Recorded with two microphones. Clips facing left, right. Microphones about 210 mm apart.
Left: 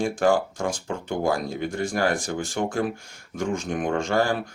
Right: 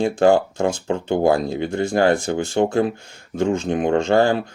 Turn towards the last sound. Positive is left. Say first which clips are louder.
# right 7 dB
turn(degrees=-25)  # may be behind; listen again after turning